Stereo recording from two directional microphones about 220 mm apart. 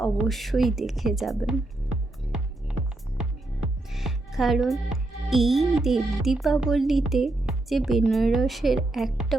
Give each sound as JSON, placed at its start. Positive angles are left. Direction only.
{"t": 0.0, "sound": "a woman's voice", "side_deg": 0}
{"t": 3.9, "sound": "speech", "side_deg": 0}